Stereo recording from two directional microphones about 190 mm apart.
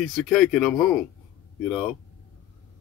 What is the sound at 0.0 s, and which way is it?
Speech, centre (ahead or behind).